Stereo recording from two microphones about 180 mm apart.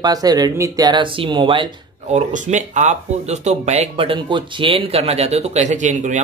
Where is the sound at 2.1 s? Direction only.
40° right (ahead or behind).